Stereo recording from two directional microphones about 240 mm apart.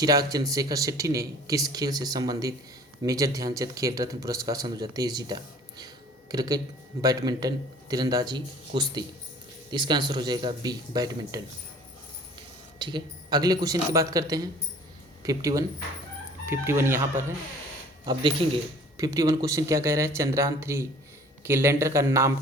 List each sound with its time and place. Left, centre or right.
0.0 s speech: centre
12.8 s speech: centre